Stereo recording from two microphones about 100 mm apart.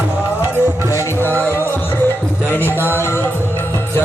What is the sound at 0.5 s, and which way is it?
Music, 20° right (ahead or behind).